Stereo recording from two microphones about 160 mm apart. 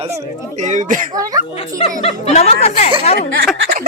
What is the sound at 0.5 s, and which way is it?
Speech, 50° right (ahead or behind).